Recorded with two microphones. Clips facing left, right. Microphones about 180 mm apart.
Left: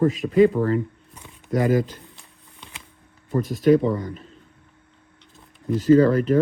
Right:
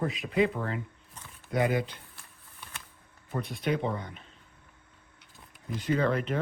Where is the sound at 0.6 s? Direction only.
80° left.